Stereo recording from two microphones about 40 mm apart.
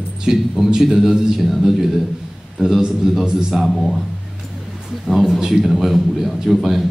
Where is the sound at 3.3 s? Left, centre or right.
Centre.